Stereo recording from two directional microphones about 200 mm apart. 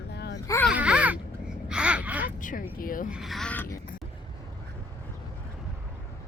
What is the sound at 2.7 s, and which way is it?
Speech, 45° left (ahead or behind).